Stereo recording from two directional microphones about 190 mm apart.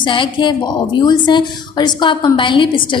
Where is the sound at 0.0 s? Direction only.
25° left (ahead or behind).